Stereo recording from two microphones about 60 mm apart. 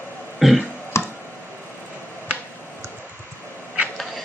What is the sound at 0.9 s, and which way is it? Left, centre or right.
Tick, left.